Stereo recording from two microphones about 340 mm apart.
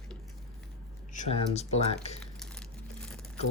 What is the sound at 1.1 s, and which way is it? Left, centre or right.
Speech, centre.